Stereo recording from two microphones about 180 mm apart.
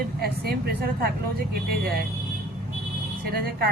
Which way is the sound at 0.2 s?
60° right (ahead or behind).